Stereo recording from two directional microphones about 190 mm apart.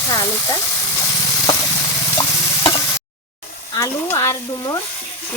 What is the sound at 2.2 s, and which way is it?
Stir, 20° left (ahead or behind).